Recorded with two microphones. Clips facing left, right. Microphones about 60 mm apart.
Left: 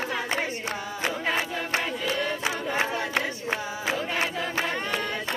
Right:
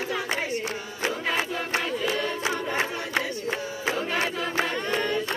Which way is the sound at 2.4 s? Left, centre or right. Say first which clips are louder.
Even; left.